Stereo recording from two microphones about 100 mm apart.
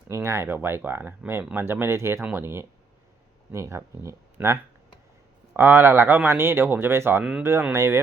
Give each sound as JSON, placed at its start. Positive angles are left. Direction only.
{"t": 0.1, "sound": "speech", "side_deg": -30}
{"t": 5.5, "sound": "speech", "side_deg": -20}